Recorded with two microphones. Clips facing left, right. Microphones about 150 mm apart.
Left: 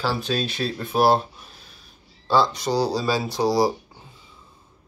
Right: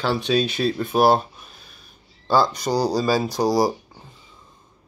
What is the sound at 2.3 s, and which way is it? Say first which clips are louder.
Speech: right 1 dB; centre (ahead or behind).